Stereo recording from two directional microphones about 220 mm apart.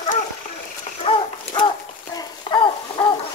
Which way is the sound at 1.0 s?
25° left (ahead or behind).